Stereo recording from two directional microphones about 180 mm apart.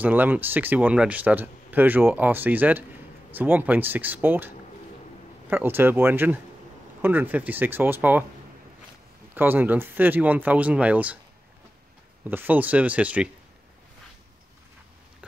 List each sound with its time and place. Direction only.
0.0 s speech: 10° right (ahead or behind)
5.5 s speech: 10° right (ahead or behind)
9.3 s speech: 10° right (ahead or behind)
12.3 s speech: 10° right (ahead or behind)